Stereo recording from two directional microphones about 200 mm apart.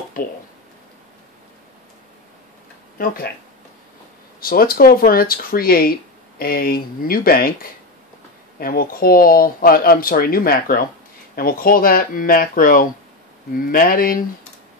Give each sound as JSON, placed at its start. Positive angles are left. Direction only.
{"t": 0.2, "sound": "speech", "side_deg": 45}
{"t": 3.0, "sound": "speech", "side_deg": 45}
{"t": 4.4, "sound": "speech", "side_deg": 45}
{"t": 8.5, "sound": "speech", "side_deg": 45}